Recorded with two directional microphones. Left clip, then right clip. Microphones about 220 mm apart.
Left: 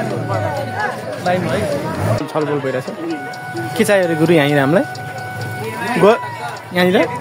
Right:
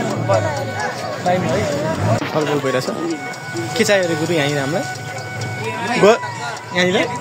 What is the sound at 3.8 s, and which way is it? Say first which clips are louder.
Speech: left 2 dB; 25° left (ahead or behind).